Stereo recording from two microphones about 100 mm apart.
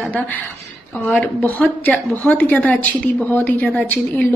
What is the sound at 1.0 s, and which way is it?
A woman's voice, 15° left (ahead or behind).